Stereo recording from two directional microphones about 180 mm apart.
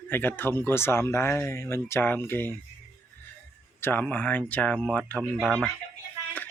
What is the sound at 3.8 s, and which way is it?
Speech, 10° left (ahead or behind).